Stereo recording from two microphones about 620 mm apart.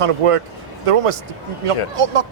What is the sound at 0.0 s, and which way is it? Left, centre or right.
A man's voice, right.